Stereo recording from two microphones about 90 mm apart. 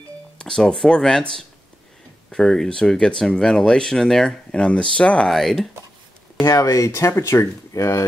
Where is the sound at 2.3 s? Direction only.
5° left (ahead or behind).